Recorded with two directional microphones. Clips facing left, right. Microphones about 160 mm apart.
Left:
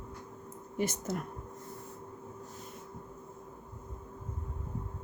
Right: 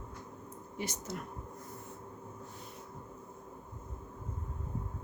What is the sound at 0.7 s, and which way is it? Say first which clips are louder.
Speech: left 7 dB; 50° left (ahead or behind).